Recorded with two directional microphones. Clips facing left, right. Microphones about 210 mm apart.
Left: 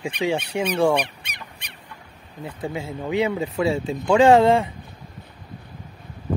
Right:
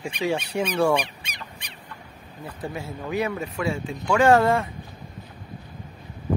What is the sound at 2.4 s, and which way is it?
Speech, 20° left (ahead or behind).